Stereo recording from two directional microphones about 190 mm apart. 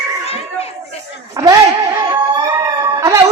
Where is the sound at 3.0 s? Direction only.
15° right (ahead or behind).